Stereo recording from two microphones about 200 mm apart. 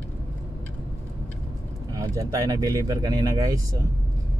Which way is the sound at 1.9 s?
15° right (ahead or behind).